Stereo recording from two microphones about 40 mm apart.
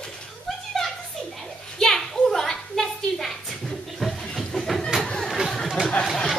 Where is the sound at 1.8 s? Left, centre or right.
Centre.